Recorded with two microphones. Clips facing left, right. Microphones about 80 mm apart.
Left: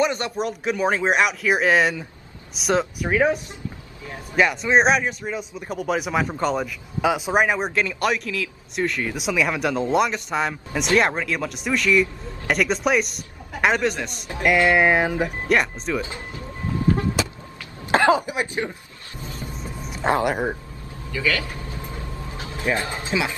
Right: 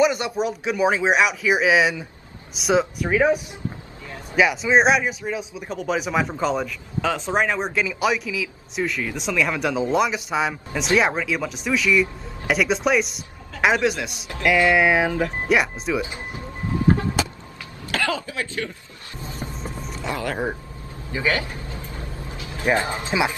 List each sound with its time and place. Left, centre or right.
0.0 s speech: centre
4.4 s speech: centre
16.0 s speech: right
17.9 s speech: left
20.1 s speech: left
21.1 s speech: right
22.4 s a sound: left
22.7 s speech: right